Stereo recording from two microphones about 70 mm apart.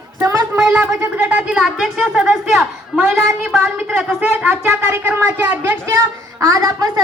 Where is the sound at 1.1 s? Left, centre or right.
Right.